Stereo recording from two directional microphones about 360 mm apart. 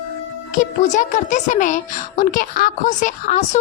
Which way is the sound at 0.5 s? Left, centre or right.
Left.